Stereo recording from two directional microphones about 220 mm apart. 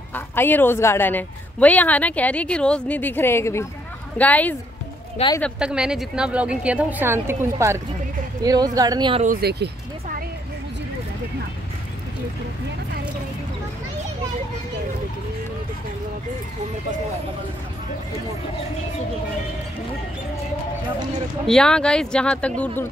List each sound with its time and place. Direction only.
0.1 s a woman's voice: 10° left (ahead or behind)
5.1 s speech: 20° left (ahead or behind)
5.4 s a woman's voice: 5° right (ahead or behind); by 9.2 s 20° right (ahead or behind)
9.2 s speech: 40° right (ahead or behind)
21.5 s a woman's voice: 5° left (ahead or behind)